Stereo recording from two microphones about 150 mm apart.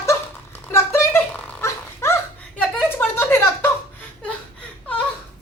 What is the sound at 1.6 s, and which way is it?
Dog, 15° left (ahead or behind).